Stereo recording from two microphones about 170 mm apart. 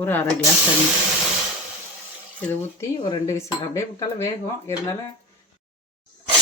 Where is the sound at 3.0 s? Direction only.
30° left (ahead or behind).